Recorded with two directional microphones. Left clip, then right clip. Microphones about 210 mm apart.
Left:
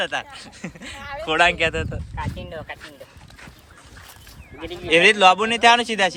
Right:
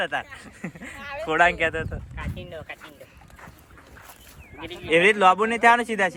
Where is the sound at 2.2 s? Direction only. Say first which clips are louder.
Left 6 dB; 40° left (ahead or behind).